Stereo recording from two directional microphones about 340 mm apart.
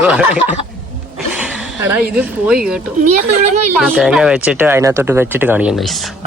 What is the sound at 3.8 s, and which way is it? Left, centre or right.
Speech, centre.